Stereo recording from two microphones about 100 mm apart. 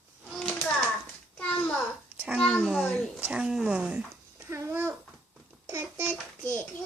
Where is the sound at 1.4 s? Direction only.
15° left (ahead or behind).